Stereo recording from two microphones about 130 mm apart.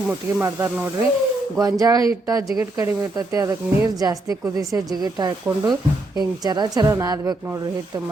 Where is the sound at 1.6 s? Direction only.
25° right (ahead or behind).